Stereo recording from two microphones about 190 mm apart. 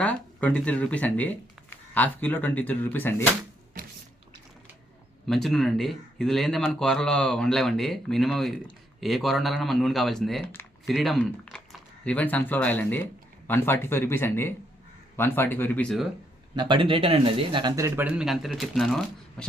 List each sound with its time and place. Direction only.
0.0 s speech: 5° left (ahead or behind)
5.2 s speech: centre (ahead or behind)
10.8 s speech: centre (ahead or behind)
16.6 s speech: 25° right (ahead or behind); by 19.5 s 5° left (ahead or behind)